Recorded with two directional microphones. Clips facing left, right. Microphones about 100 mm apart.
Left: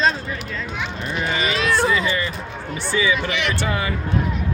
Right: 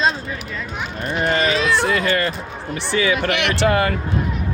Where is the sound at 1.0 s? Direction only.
55° right (ahead or behind).